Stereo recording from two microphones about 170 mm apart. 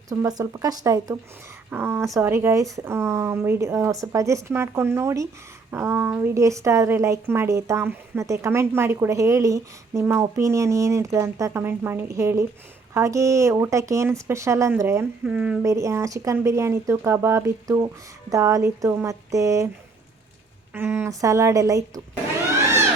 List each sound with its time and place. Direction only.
0.1 s a woman's voice: 20° right (ahead or behind)
15.6 s a woman's voice: 15° right (ahead or behind)
20.7 s speech: 15° right (ahead or behind)